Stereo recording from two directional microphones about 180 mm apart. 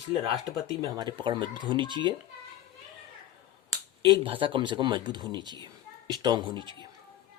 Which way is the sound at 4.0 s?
30° right (ahead or behind).